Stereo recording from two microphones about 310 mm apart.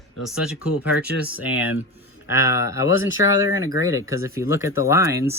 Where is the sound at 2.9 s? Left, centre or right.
Left.